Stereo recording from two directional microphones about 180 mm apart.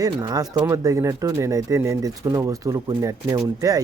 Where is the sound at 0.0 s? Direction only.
20° right (ahead or behind).